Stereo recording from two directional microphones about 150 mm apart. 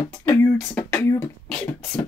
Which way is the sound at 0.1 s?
10° left (ahead or behind).